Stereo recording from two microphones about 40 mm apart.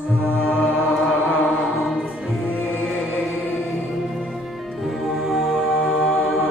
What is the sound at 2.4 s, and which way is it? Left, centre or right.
Music, left.